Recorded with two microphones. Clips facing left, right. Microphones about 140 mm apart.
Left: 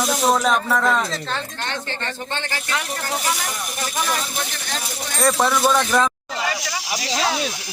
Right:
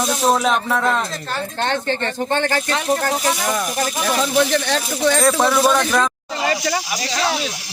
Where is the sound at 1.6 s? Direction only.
50° right (ahead or behind).